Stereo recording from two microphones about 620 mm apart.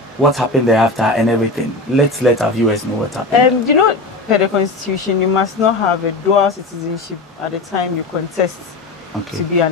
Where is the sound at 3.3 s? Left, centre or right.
Left.